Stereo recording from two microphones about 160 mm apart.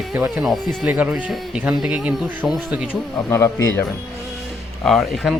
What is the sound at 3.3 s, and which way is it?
Speech, 20° left (ahead or behind).